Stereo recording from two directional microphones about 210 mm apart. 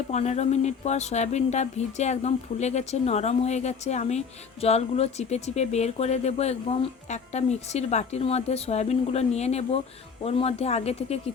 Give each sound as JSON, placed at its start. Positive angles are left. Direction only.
{"t": 0.1, "sound": "speech", "side_deg": 30}